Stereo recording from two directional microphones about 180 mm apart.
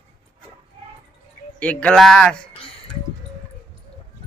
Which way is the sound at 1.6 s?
5° left (ahead or behind).